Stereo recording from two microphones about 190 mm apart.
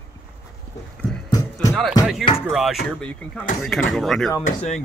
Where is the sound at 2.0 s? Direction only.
Centre (ahead or behind).